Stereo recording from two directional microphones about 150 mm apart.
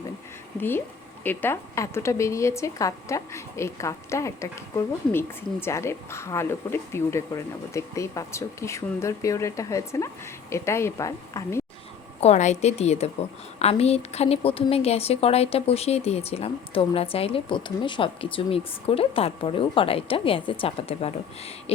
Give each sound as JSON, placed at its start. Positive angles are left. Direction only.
{"t": 1.2, "sound": "a woman's voice", "side_deg": 15}
{"t": 12.2, "sound": "a woman's voice", "side_deg": 50}